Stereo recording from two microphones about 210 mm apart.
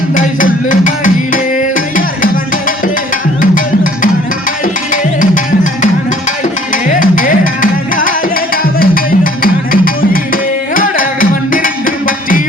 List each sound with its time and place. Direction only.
0.1 s music: 40° left (ahead or behind)
4.6 s music: 40° left (ahead or behind)